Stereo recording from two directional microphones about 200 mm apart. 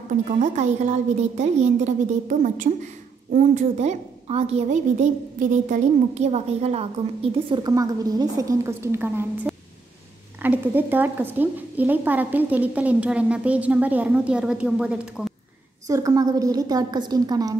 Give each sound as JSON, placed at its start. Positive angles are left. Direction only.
{"t": 0.3, "sound": "a woman's voice", "side_deg": -35}
{"t": 7.4, "sound": "a woman's voice", "side_deg": -20}
{"t": 15.9, "sound": "a woman's voice", "side_deg": -15}